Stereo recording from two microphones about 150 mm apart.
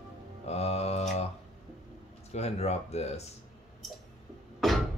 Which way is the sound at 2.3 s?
45° left (ahead or behind).